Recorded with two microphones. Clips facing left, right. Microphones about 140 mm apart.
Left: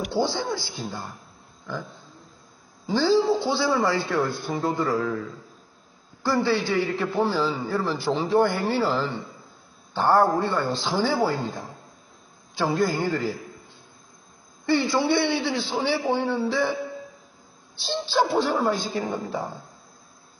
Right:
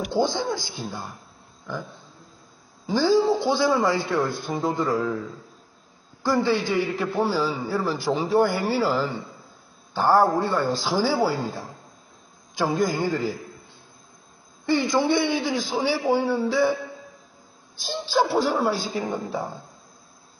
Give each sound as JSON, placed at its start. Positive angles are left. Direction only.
{"t": 0.1, "sound": "a man's voice", "side_deg": -15}
{"t": 2.8, "sound": "a man's voice", "side_deg": -15}
{"t": 6.2, "sound": "a man's voice", "side_deg": -15}
{"t": 14.7, "sound": "a man's voice", "side_deg": -15}
{"t": 18.0, "sound": "a man's voice", "side_deg": -10}